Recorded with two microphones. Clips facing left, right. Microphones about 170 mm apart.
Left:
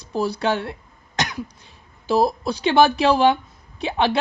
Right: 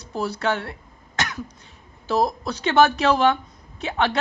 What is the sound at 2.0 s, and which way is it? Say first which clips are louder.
A man's voice: left 3 dB; 10° left (ahead or behind).